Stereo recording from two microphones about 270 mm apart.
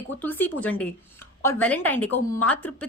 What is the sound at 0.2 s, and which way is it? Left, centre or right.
A woman's voice, centre.